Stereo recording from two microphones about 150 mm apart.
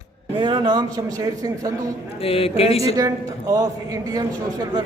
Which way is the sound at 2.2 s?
40° left (ahead or behind).